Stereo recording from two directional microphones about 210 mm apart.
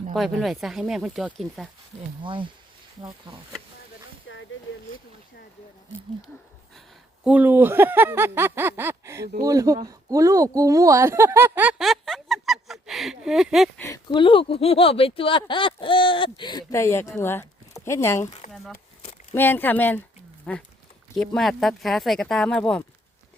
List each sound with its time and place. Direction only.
0.1 s speech: centre (ahead or behind)
2.2 s speech: 25° right (ahead or behind)
4.3 s a sound: 65° left (ahead or behind)
7.3 s speech: 10° right (ahead or behind)
13.8 s speech: 20° left (ahead or behind)
18.5 s speech: centre (ahead or behind)